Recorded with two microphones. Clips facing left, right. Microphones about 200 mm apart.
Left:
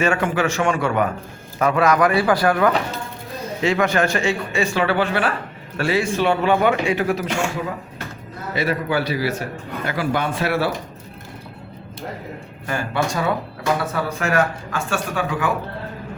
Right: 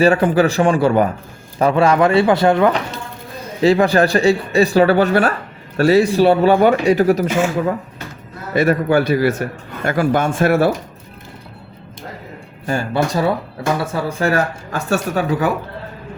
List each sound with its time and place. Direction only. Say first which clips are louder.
0.0 s speech: right 7 dB; 35° right (ahead or behind)
3.6 s speech: right 6 dB; 35° right (ahead or behind)
7.3 s speech: right 6 dB; centre (ahead or behind)
8.5 s a man's voice: right 7 dB; 50° right (ahead or behind)
12.6 s speech: right 4 dB; 30° right (ahead or behind)